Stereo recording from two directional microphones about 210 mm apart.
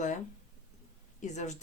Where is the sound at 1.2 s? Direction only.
35° left (ahead or behind).